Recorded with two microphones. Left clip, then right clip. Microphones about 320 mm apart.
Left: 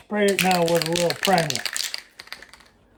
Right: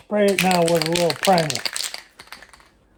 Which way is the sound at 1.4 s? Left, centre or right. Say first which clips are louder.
Right 1 dB; centre.